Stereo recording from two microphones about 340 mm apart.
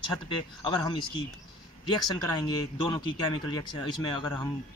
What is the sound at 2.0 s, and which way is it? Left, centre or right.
Speech, centre.